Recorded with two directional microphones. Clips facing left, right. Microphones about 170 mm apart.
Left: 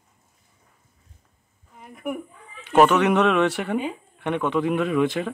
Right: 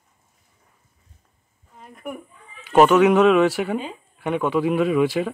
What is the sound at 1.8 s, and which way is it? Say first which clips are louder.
Speech: left 3 dB; 10° left (ahead or behind).